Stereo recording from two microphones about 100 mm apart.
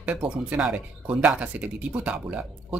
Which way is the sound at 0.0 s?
15° right (ahead or behind).